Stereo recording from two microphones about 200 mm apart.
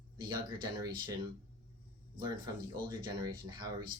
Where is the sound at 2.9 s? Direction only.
20° right (ahead or behind).